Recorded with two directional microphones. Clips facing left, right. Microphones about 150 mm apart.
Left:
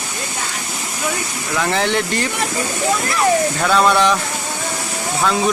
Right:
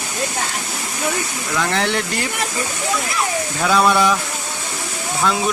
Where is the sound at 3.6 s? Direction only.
5° right (ahead or behind).